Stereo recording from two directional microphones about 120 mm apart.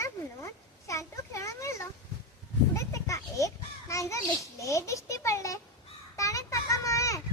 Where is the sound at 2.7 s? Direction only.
25° left (ahead or behind).